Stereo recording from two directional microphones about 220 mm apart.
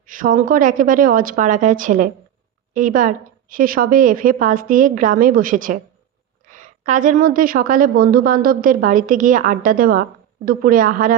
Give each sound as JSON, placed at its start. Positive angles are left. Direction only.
{"t": 0.0, "sound": "a woman's voice", "side_deg": -40}